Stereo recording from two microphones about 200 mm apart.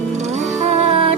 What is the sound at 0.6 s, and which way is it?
Music, 35° right (ahead or behind).